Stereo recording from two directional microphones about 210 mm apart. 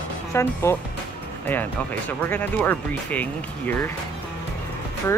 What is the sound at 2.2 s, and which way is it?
Speech, 10° left (ahead or behind).